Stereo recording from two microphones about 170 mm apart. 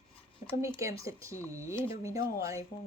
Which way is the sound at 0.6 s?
15° right (ahead or behind).